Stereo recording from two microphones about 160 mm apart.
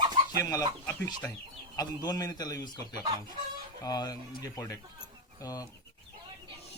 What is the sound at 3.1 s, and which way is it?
Speech, 30° right (ahead or behind).